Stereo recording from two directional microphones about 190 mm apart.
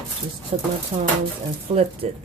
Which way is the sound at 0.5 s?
30° right (ahead or behind).